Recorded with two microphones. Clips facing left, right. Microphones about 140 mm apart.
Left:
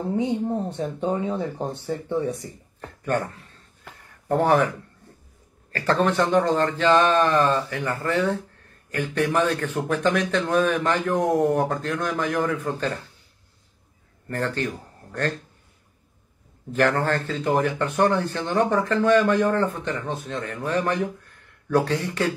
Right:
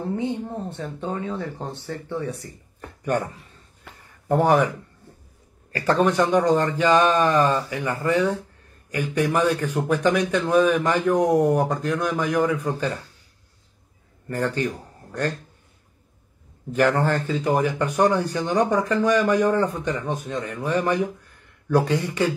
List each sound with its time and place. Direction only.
0.1 s speech: 15° left (ahead or behind)
2.8 s a sound: 10° right (ahead or behind)
3.9 s a sound: centre (ahead or behind)
4.3 s speech: 10° right (ahead or behind)
14.2 s speech: 10° right (ahead or behind)
16.7 s speech: 10° right (ahead or behind)